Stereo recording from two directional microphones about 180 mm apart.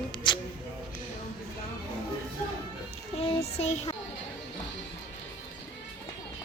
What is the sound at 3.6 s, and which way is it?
Speech, 35° left (ahead or behind).